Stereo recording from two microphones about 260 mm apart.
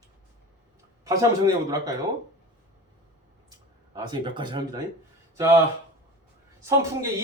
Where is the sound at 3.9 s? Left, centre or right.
Centre.